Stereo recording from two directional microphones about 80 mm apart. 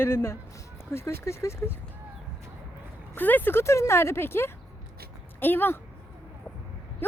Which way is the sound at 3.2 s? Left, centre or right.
Left.